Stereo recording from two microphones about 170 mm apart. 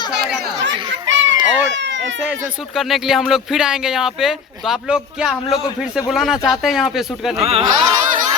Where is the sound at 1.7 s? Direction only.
90° right.